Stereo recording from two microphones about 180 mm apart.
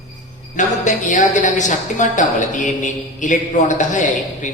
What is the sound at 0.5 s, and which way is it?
Speech, 45° left (ahead or behind).